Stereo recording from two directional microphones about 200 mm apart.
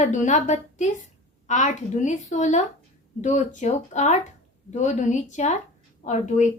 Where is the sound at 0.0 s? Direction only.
40° left (ahead or behind).